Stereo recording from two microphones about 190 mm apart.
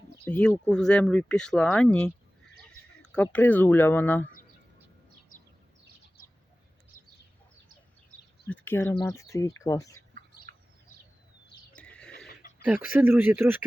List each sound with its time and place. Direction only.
0.3 s speech: 5° left (ahead or behind)
6.9 s a sound: 45° left (ahead or behind)
8.4 s speech: 10° left (ahead or behind)
10.5 s bird: 45° right (ahead or behind)
11.7 s neigh: 5° left (ahead or behind)
12.4 s a sound: 50° left (ahead or behind)
12.6 s speech: 10° right (ahead or behind)